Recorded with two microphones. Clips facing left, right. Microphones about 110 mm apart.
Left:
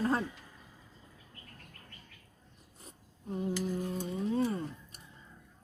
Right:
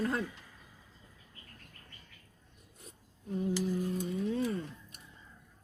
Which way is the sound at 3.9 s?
35° left (ahead or behind).